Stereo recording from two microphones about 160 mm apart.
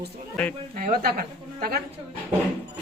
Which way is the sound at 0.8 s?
60° right (ahead or behind).